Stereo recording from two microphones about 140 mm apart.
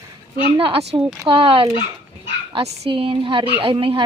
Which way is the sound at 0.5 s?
40° right (ahead or behind).